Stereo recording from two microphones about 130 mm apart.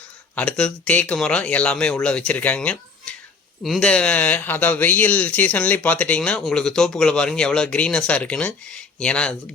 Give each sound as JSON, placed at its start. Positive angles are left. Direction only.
{"t": 0.3, "sound": "speech", "side_deg": 5}